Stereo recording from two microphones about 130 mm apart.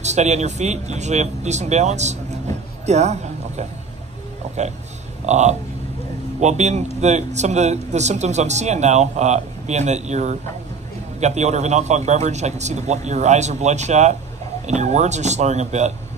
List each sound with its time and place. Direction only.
0.0 s speech: 60° right (ahead or behind)
2.9 s a sound: 60° right (ahead or behind)
4.6 s speech: 60° right (ahead or behind)